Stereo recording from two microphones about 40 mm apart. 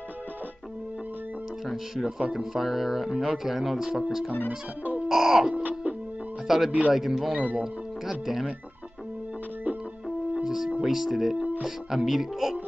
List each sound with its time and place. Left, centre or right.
1.7 s speech: centre
4.5 s music: right
5.0 s music: centre
5.5 s music: right
6.4 s speech: centre
10.3 s music: centre
10.8 s speech: centre